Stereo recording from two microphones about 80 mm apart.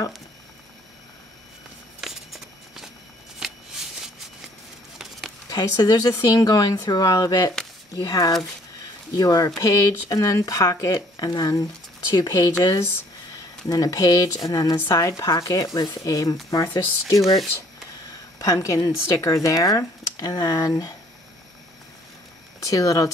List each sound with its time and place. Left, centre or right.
2.0 s a sound: centre
5.5 s speech: left
13.7 s speech: left
18.4 s speech: left
22.6 s speech: left